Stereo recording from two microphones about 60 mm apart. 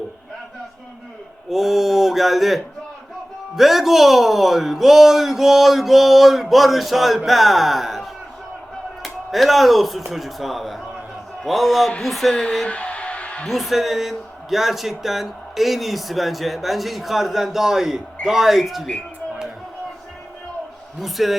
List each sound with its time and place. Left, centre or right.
1.5 s speech: centre
12.6 s music: left
13.5 s speech: centre
21.0 s speech: centre